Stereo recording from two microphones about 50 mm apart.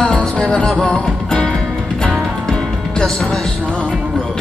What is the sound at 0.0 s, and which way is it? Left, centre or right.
Music, left.